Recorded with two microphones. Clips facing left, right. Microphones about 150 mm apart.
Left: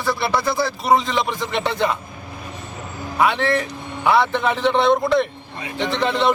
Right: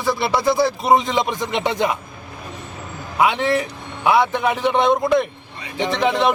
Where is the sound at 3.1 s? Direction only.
15° right (ahead or behind).